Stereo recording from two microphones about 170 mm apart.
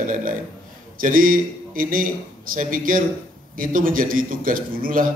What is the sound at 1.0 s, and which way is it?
A man's voice, 55° right (ahead or behind).